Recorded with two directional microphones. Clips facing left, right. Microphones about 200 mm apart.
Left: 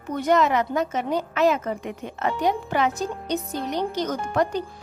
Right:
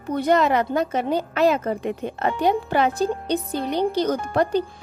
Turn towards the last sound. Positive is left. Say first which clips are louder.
# right 3 dB
turn(degrees=-35)  # may be behind; listen again after turning